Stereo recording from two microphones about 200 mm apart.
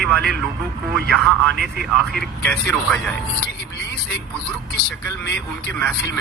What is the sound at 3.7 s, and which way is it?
Vehicle, 55° left (ahead or behind).